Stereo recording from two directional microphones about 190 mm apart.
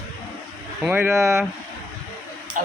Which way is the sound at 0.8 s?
10° right (ahead or behind).